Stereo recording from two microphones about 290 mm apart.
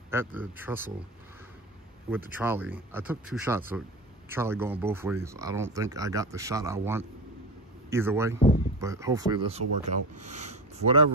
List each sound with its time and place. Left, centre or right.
0.1 s speech: centre
2.0 s speech: centre